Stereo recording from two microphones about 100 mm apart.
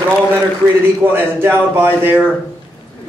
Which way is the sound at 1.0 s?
20° right (ahead or behind).